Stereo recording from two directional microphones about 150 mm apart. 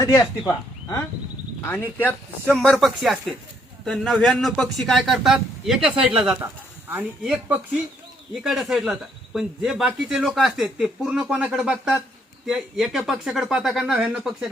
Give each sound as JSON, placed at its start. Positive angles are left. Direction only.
{"t": 0.0, "sound": "speech", "side_deg": 20}